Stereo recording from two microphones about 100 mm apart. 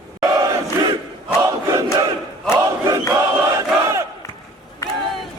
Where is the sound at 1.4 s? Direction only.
30° right (ahead or behind).